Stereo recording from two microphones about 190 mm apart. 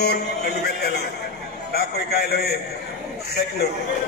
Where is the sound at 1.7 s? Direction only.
55° left (ahead or behind).